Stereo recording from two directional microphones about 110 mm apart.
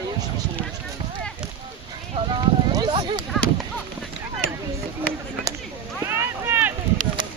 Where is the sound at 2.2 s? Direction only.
40° right (ahead or behind).